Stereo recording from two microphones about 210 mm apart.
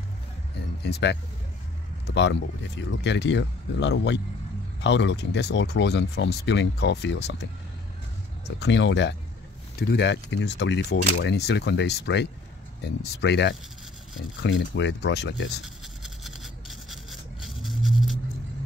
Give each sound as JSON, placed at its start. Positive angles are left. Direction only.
{"t": 0.8, "sound": "speech", "side_deg": 50}
{"t": 8.5, "sound": "speech", "side_deg": 55}
{"t": 15.6, "sound": "toothbrush", "side_deg": 0}